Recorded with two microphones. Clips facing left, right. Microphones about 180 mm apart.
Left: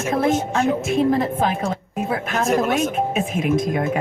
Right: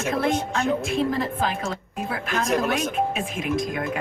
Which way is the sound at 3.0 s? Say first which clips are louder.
Left 4 dB; 45° left (ahead or behind).